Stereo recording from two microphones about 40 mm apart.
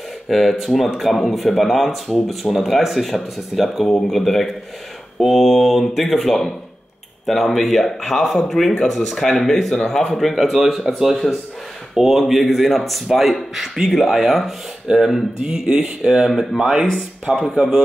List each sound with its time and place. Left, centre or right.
0.3 s speech: centre
9.7 s speech: centre
15.4 s speech: centre
16.3 s speech: centre
17.6 s speech: centre